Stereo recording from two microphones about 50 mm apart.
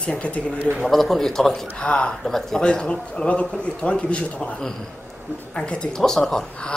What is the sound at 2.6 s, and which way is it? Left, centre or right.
A man's voice, centre.